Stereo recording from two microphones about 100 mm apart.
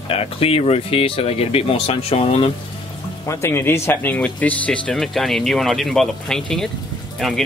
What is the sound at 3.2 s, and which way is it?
Speech, 25° left (ahead or behind).